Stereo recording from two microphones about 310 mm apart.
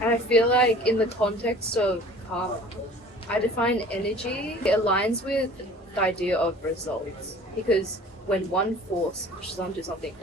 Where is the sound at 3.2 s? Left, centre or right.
Centre.